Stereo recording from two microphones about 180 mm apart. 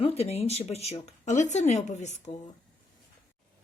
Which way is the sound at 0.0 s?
35° left (ahead or behind).